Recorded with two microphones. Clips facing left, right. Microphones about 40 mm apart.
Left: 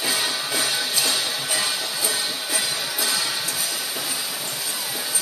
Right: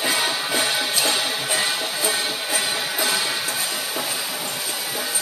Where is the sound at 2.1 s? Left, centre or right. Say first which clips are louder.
Right 4 dB; right.